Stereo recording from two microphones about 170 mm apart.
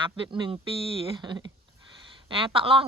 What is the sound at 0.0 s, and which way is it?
Speech, 30° right (ahead or behind).